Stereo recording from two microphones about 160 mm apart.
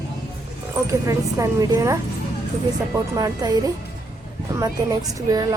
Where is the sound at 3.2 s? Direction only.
25° right (ahead or behind).